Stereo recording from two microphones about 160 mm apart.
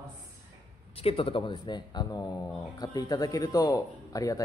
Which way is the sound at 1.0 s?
35° left (ahead or behind).